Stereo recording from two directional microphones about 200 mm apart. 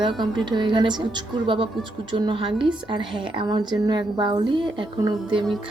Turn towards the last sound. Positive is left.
turn(degrees=-25)  # may be behind; listen again after turning